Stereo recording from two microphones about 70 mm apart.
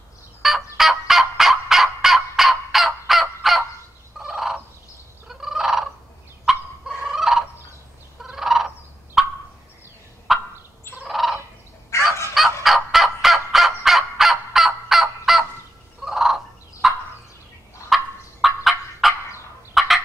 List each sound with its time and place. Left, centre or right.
0.4 s fowl: centre
4.2 s gobble: centre
5.3 s fowl: centre
8.2 s turkey: centre
10.3 s fowl: centre
11.9 s fowl: left
12.4 s fowl: centre
16.0 s turkey: centre
19.7 s fowl: centre